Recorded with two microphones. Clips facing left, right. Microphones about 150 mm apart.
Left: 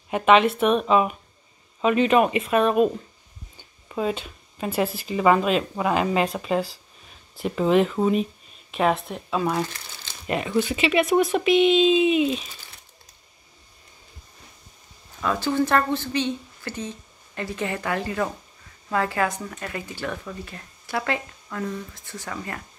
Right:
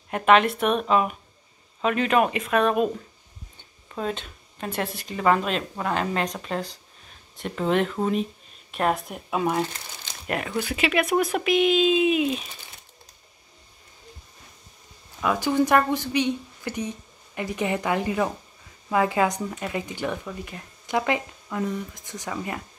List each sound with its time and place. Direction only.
0.1 s speech: centre (ahead or behind)
9.3 s speech: 15° right (ahead or behind)
10.2 s speech: centre (ahead or behind)
15.2 s speech: 15° right (ahead or behind)